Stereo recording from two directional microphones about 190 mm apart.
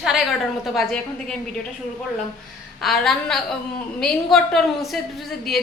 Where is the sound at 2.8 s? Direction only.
Centre (ahead or behind).